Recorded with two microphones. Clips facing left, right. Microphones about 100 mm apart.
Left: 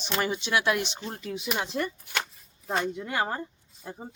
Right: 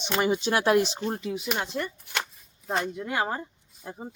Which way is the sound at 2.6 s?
Centre (ahead or behind).